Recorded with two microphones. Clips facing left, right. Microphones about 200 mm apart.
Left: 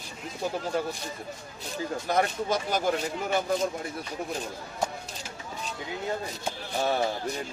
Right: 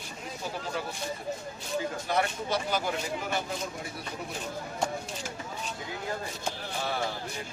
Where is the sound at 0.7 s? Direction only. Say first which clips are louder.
Left 7 dB; 45° left (ahead or behind).